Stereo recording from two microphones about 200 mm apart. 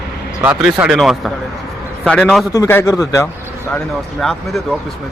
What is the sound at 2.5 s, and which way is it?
Speech, 15° left (ahead or behind).